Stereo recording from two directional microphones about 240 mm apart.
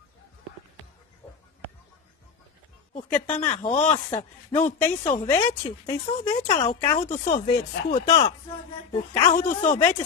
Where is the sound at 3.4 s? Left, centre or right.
Left.